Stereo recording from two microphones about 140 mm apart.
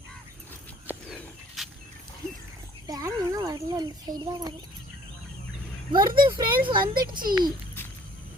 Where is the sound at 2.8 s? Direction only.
25° right (ahead or behind).